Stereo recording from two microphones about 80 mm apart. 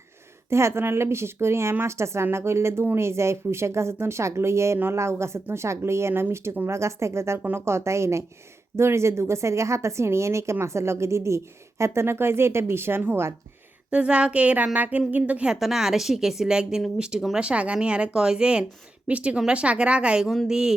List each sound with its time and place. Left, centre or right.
0.5 s a woman's voice: right
13.9 s speech: centre
15.5 s speech: centre